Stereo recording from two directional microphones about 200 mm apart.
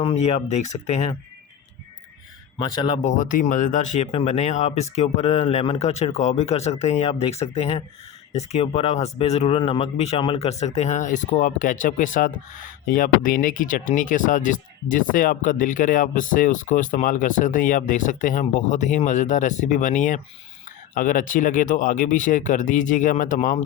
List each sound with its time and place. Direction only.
0.0 s speech: 35° left (ahead or behind)
2.6 s speech: 25° left (ahead or behind); by 23.6 s 40° left (ahead or behind)